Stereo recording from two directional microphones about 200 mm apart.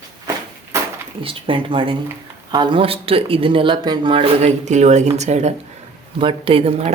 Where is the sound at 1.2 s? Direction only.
25° right (ahead or behind).